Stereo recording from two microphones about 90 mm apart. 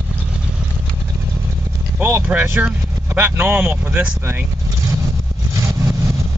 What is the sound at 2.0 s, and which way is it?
Speech, 20° right (ahead or behind).